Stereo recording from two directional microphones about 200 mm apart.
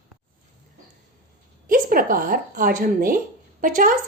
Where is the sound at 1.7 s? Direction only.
45° right (ahead or behind).